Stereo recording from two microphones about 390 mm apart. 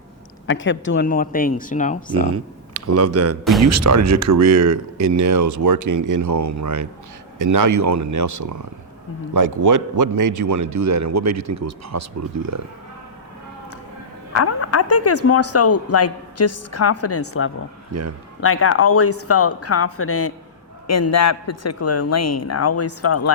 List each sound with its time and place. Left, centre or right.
0.4 s speech: left
2.8 s speech: right
14.4 s speech: left
17.9 s speech: right
18.3 s speech: left